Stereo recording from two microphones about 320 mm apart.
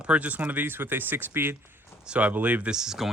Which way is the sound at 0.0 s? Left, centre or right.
Centre.